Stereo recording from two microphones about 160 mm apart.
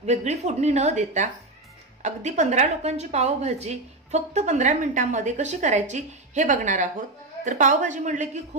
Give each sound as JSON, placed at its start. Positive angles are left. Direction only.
{"t": 0.0, "sound": "a woman's voice", "side_deg": -45}